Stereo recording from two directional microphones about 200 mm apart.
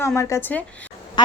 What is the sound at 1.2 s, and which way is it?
Speech, 20° left (ahead or behind).